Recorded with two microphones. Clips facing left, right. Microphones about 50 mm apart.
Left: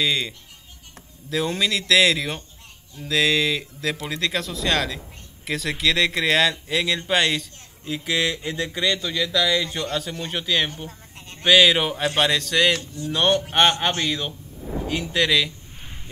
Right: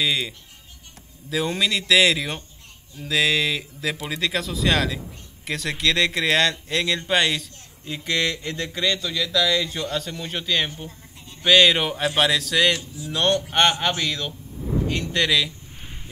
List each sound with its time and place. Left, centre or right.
0.0 s speech: centre
1.3 s speech: centre
10.9 s a sound: left
11.4 s speech: centre
12.7 s speech: left
13.1 s a man's voice: centre
14.0 s a sound: centre